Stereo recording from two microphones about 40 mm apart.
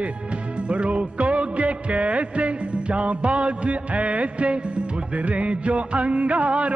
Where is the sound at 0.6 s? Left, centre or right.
Right.